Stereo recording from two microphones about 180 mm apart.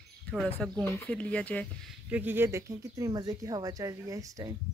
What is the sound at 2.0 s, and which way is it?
Speech, 10° right (ahead or behind).